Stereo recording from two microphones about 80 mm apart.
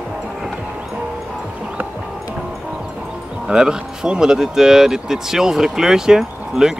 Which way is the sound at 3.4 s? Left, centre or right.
Centre.